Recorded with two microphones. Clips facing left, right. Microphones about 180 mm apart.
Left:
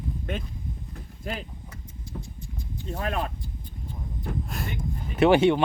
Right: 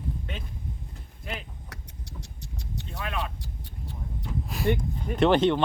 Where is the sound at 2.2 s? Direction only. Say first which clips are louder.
Left 2 dB; 75° right (ahead or behind).